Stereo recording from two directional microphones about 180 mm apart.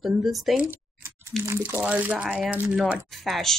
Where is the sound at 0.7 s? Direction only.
15° right (ahead or behind).